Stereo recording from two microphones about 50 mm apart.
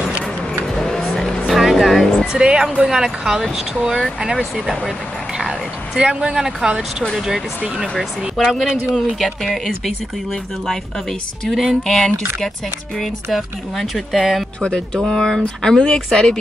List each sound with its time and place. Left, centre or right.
0.7 s vehicle: centre
1.5 s music: centre
2.3 s speech: centre
5.5 s a sound: centre
6.3 s speech: centre
13.3 s speech: centre
15.0 s speech: centre